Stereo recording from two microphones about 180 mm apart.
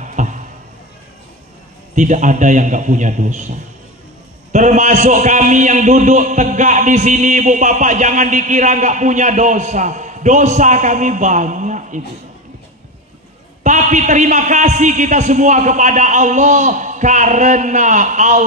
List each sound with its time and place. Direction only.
0.0 s a sound: 45° right (ahead or behind)
2.0 s a man's voice: 45° right (ahead or behind)
13.7 s a man's voice: 45° right (ahead or behind)